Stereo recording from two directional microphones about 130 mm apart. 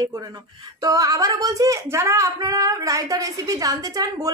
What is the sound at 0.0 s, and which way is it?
Speech, 25° right (ahead or behind).